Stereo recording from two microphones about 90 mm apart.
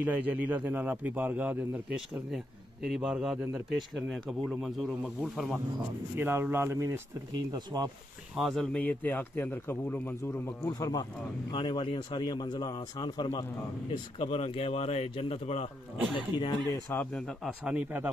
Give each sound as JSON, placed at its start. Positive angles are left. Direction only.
{"t": 0.0, "sound": "a man's voice", "side_deg": -20}
{"t": 2.9, "sound": "a man's voice", "side_deg": -5}
{"t": 6.1, "sound": "a man's voice", "side_deg": -25}
{"t": 7.3, "sound": "speech", "side_deg": -50}
{"t": 8.4, "sound": "speech", "side_deg": 0}
{"t": 8.7, "sound": "a man's voice", "side_deg": 20}
{"t": 10.7, "sound": "speech", "side_deg": 45}
{"t": 11.5, "sound": "speech", "side_deg": 65}
{"t": 13.4, "sound": "speech", "side_deg": 90}
{"t": 16.2, "sound": "speech", "side_deg": 70}
{"t": 16.9, "sound": "a man's voice", "side_deg": 25}
{"t": 17.7, "sound": "a man's voice", "side_deg": -15}